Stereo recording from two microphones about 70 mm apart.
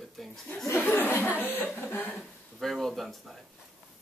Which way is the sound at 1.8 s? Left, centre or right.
Left.